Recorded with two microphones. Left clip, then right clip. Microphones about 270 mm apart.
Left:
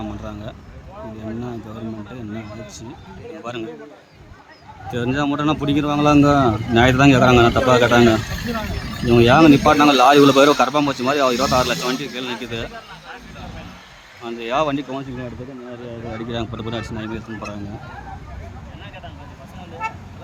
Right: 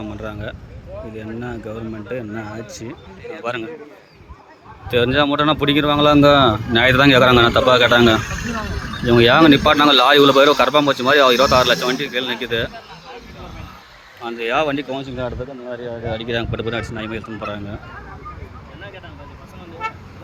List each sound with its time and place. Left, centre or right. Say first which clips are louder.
0.0 s speech: right 2 dB; centre
4.9 s speech: right 6 dB; centre
14.2 s speech: right 2 dB; centre
16.3 s speech: right 4 dB; centre